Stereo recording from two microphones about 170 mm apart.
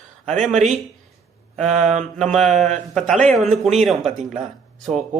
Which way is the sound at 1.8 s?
45° right (ahead or behind).